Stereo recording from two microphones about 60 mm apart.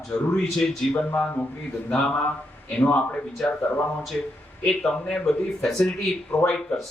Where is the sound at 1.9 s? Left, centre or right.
Left; by 5.9 s centre.